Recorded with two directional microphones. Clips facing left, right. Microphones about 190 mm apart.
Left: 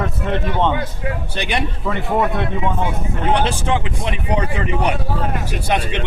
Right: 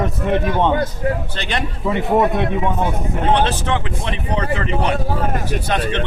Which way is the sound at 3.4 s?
15° left (ahead or behind).